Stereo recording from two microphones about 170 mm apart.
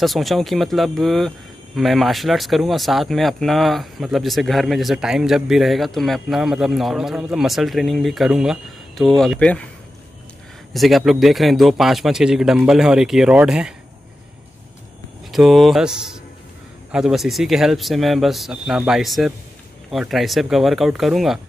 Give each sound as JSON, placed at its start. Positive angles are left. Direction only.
{"t": 0.0, "sound": "speech", "side_deg": 0}
{"t": 10.7, "sound": "speech", "side_deg": 0}
{"t": 15.3, "sound": "speech", "side_deg": 0}